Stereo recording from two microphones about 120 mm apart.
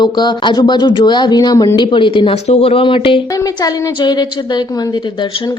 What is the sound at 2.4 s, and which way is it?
A woman's voice, 60° left (ahead or behind).